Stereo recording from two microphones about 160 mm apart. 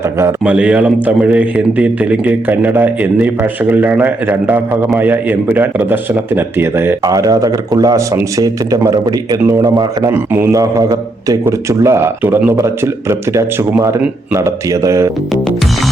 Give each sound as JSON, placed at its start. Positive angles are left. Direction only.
{"t": 0.2, "sound": "a man's voice", "side_deg": -15}